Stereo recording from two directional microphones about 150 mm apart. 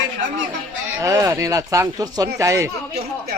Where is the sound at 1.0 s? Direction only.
20° right (ahead or behind).